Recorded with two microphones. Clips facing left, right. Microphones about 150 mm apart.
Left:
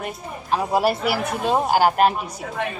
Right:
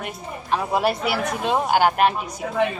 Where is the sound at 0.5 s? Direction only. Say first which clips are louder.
Left 1 dB; centre (ahead or behind).